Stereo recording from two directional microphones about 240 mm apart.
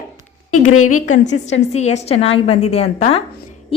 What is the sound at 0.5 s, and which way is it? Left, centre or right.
Speech, left.